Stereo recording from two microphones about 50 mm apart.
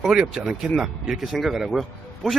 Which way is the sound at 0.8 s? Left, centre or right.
Centre.